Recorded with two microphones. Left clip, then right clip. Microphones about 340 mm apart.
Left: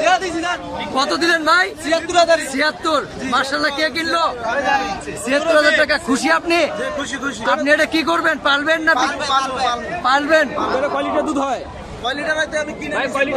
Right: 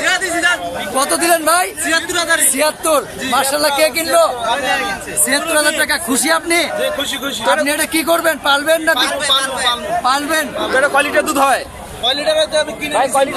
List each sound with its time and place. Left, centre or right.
0.0 s a sound: centre
0.9 s a man's voice: centre
1.9 s a man's voice: centre
2.5 s a man's voice: centre
5.3 s a man's voice: centre
10.8 s a man's voice: right
12.0 s a man's voice: centre
12.9 s a man's voice: centre